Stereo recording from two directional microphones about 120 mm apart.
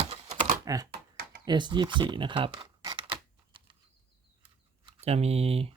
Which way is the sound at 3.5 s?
45° right (ahead or behind).